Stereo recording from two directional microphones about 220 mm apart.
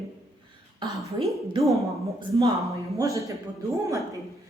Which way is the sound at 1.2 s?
20° right (ahead or behind).